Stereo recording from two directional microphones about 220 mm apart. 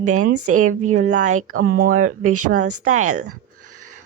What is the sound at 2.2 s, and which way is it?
Speech, 90° right.